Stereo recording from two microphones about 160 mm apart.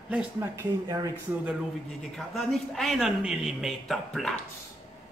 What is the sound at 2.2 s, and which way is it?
A man's voice, centre (ahead or behind).